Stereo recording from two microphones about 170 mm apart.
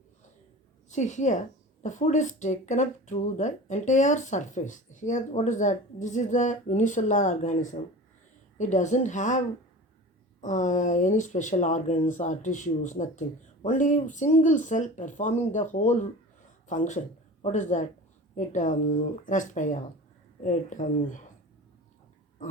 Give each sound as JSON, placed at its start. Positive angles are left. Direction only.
{"t": 0.9, "sound": "a woman's voice", "side_deg": 45}
{"t": 10.4, "sound": "speech", "side_deg": 45}